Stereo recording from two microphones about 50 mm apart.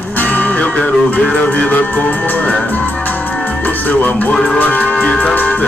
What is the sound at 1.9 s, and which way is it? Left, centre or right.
Music, left.